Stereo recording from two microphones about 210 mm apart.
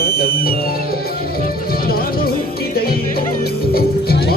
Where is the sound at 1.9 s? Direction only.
45° left (ahead or behind).